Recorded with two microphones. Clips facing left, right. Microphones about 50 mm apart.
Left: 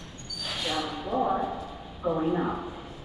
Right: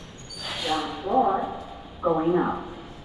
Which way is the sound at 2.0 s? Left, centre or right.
Centre.